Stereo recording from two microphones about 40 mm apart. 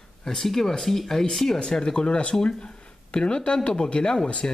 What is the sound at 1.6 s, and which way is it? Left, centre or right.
Speech, centre.